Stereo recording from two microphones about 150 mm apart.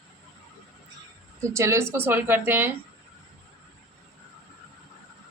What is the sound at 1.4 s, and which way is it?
A woman's voice, 20° right (ahead or behind).